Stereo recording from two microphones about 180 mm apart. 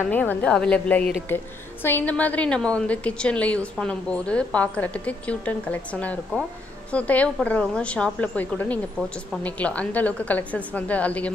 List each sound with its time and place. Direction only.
0.1 s a woman's voice: 10° left (ahead or behind)